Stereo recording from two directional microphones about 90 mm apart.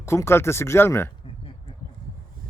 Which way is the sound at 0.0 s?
30° left (ahead or behind).